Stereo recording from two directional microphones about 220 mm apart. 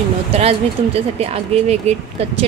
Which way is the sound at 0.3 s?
25° right (ahead or behind).